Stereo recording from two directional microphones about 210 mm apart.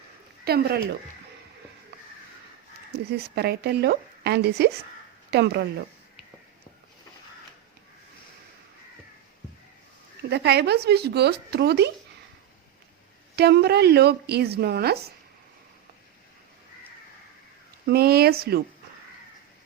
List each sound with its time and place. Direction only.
0.4 s a woman's voice: 50° right (ahead or behind)
3.1 s a woman's voice: 50° right (ahead or behind)
10.2 s a woman's voice: 50° right (ahead or behind)
13.3 s a woman's voice: 50° right (ahead or behind)
17.8 s a woman's voice: 50° right (ahead or behind)